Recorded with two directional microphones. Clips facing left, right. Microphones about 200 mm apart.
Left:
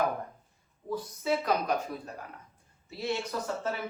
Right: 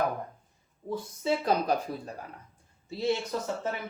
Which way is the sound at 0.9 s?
25° right (ahead or behind).